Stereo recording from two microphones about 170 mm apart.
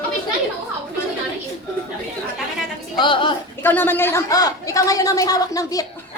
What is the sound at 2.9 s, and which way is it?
Speech, 30° left (ahead or behind).